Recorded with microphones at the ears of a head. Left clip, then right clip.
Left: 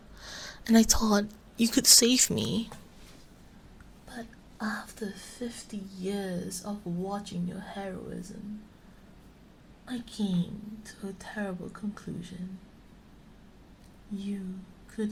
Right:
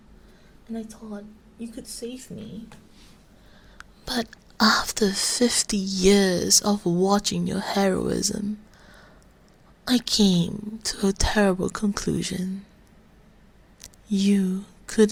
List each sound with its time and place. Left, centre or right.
0.3 s speech: left
3.8 s speech: right
9.8 s speech: right
13.8 s a woman's voice: right